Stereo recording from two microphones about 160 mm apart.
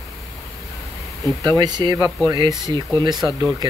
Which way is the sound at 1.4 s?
25° right (ahead or behind).